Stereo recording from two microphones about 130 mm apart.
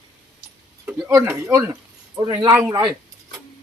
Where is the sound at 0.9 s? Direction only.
15° right (ahead or behind).